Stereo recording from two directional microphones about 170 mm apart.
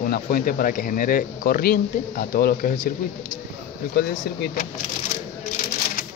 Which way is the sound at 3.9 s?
60° left (ahead or behind).